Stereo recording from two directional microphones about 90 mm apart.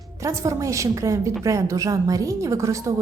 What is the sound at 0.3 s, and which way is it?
A woman's voice, 35° right (ahead or behind).